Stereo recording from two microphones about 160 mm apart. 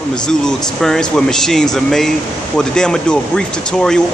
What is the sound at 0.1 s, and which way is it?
Speech, 5° left (ahead or behind).